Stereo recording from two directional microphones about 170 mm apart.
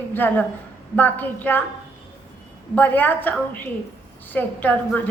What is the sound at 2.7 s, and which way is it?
A woman's voice, 10° left (ahead or behind).